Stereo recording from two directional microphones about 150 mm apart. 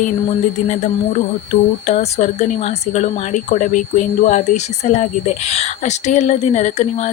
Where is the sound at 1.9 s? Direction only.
50° left (ahead or behind).